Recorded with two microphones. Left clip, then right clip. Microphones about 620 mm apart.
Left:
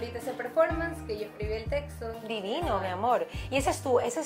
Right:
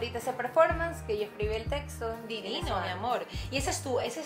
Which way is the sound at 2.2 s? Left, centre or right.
Left.